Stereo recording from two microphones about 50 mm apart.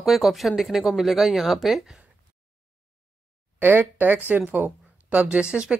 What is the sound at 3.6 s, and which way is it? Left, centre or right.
Speech, right.